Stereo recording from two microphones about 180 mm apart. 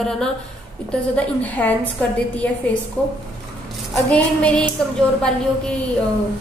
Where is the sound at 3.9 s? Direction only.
5° left (ahead or behind).